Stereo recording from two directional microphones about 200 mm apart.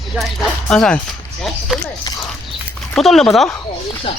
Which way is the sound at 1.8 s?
15° left (ahead or behind).